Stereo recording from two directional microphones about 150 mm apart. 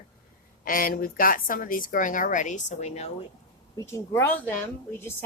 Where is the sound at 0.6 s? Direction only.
70° left (ahead or behind); by 3.1 s 45° left (ahead or behind).